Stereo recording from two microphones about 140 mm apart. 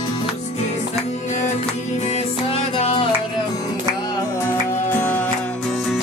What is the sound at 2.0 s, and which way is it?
Music, 50° left (ahead or behind).